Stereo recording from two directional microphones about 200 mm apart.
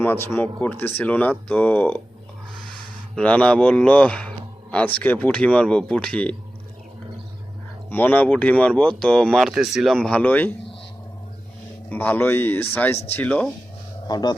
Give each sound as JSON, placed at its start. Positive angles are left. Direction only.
{"t": 0.0, "sound": "speech", "side_deg": 10}
{"t": 3.2, "sound": "speech", "side_deg": 5}
{"t": 7.9, "sound": "speech", "side_deg": 10}
{"t": 11.9, "sound": "speech", "side_deg": 10}
{"t": 14.1, "sound": "speech", "side_deg": 20}